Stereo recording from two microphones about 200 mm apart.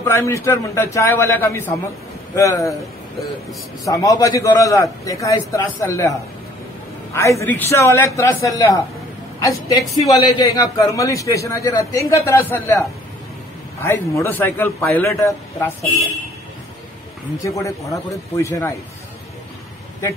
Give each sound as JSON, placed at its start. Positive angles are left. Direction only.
{"t": 0.0, "sound": "a man's voice", "side_deg": 15}
{"t": 3.8, "sound": "a man's voice", "side_deg": 15}
{"t": 7.2, "sound": "a man's voice", "side_deg": 15}
{"t": 17.5, "sound": "a man's voice", "side_deg": 15}